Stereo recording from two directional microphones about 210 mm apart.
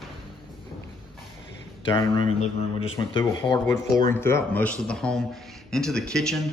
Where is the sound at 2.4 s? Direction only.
25° left (ahead or behind); by 6.4 s centre (ahead or behind).